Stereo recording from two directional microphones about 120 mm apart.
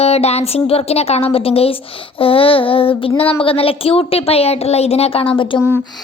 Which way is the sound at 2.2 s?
50° left (ahead or behind).